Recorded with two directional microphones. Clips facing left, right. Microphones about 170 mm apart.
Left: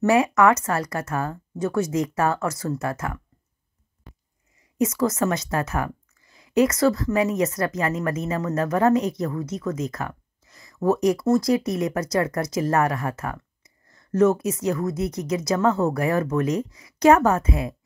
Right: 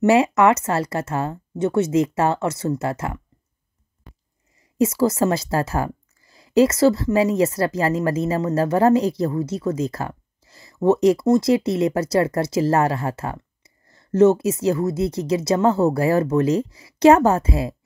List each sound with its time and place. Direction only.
0.0 s a woman's voice: 25° right (ahead or behind)
4.7 s a woman's voice: 30° right (ahead or behind)